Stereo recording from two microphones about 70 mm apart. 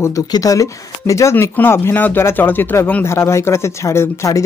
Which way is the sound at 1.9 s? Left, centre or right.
Left.